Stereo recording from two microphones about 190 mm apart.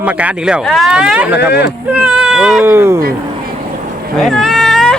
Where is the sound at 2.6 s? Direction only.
15° right (ahead or behind).